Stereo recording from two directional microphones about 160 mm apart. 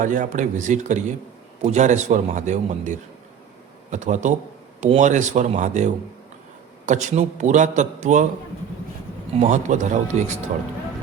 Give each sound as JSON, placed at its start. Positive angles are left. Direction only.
{"t": 0.0, "sound": "a man's voice", "side_deg": -55}
{"t": 9.4, "sound": "a man's voice", "side_deg": -50}